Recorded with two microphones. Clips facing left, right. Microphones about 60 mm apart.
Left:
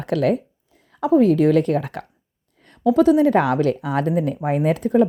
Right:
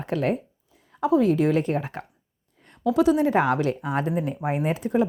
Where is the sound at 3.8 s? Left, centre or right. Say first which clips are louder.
Left 5 dB; left.